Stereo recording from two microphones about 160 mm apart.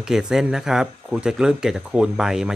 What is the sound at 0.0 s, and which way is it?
Speech, 5° right (ahead or behind).